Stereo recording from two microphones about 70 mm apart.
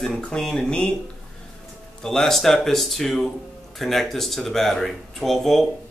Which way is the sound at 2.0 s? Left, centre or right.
Centre.